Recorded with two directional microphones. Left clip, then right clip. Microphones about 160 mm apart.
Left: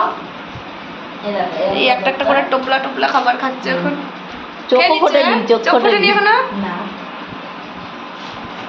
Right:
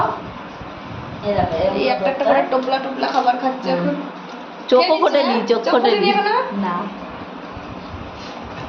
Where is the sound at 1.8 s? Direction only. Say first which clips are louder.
Left 4 dB; centre (ahead or behind).